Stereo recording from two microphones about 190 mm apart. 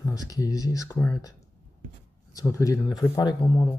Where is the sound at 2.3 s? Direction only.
15° left (ahead or behind).